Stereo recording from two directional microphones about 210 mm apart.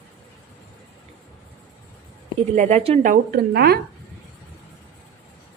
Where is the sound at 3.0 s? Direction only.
40° right (ahead or behind).